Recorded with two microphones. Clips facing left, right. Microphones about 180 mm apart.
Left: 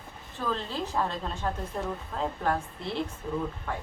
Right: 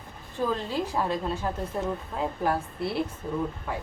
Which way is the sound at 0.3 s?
10° right (ahead or behind).